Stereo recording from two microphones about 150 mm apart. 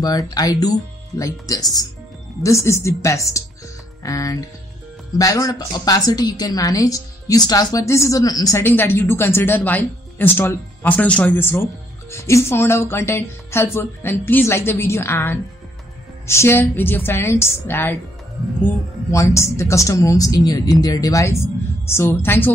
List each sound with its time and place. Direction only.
0.0 s a woman's voice: 25° left (ahead or behind)